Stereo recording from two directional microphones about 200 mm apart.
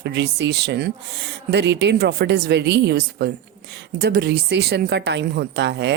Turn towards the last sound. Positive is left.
turn(degrees=-60)  # may be behind; listen again after turning